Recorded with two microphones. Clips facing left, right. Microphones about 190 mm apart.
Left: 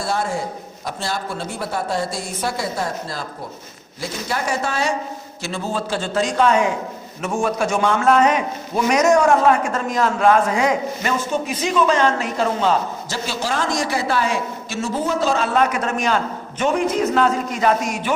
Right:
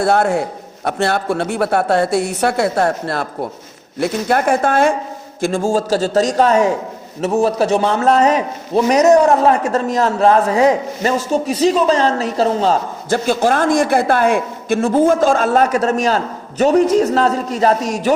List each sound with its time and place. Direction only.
0.0 s a woman's voice: 65° right (ahead or behind); by 12.8 s 35° right (ahead or behind)
13.1 s a man's voice: 55° right (ahead or behind)